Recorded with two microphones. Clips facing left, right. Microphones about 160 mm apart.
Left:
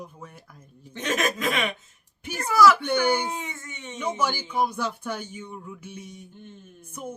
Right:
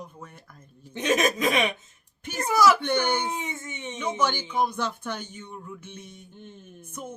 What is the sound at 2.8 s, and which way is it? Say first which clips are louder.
Speech: left 2 dB; 10° left (ahead or behind).